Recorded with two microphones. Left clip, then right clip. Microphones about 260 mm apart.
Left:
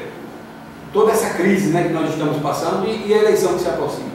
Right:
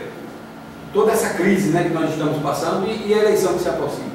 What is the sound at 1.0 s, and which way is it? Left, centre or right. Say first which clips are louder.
Speech: left 2 dB; centre.